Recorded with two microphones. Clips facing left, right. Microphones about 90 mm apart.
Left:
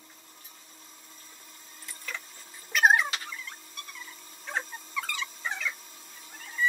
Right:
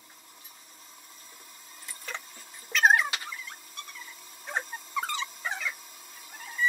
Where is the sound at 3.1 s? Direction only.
15° right (ahead or behind).